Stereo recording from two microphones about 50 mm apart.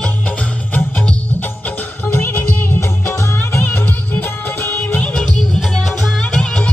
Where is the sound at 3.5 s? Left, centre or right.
Left.